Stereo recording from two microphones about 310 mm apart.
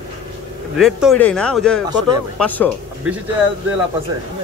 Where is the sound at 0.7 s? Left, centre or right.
Centre.